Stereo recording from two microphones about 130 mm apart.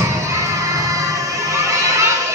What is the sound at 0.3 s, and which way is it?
Children shouting, 25° right (ahead or behind).